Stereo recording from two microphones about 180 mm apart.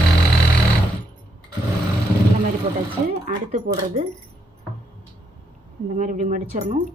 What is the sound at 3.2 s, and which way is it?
Speech, 35° right (ahead or behind).